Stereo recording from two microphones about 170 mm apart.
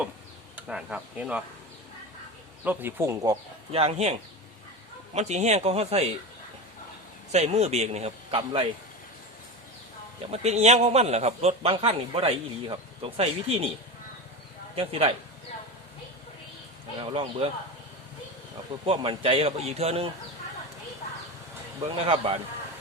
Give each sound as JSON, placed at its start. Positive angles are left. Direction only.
{"t": 0.5, "sound": "speech", "side_deg": -5}
{"t": 2.6, "sound": "speech", "side_deg": -15}
{"t": 3.7, "sound": "a man's voice", "side_deg": -35}
{"t": 7.3, "sound": "a man's voice", "side_deg": -40}
{"t": 10.3, "sound": "a man's voice", "side_deg": -40}
{"t": 14.8, "sound": "a man's voice", "side_deg": -35}
{"t": 17.0, "sound": "speech", "side_deg": -30}
{"t": 18.9, "sound": "a man's voice", "side_deg": -30}
{"t": 21.8, "sound": "a man's voice", "side_deg": -35}